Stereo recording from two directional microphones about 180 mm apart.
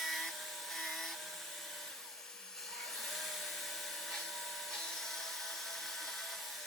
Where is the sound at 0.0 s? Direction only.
Centre (ahead or behind).